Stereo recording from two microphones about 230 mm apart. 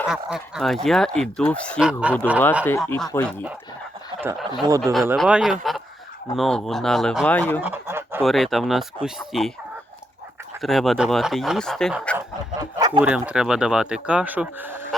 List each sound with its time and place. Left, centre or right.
0.1 s speech: centre
2.6 s speech: centre
4.2 s speech: centre
7.6 s a sound: centre
8.2 s speech: centre
10.6 s speech: centre
12.7 s a sound: centre
13.0 s speech: centre